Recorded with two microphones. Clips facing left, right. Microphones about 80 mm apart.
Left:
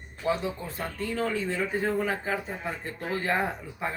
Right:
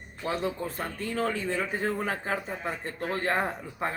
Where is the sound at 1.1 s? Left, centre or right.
Right.